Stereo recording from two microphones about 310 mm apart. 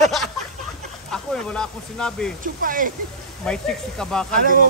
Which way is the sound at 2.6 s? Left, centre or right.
Right.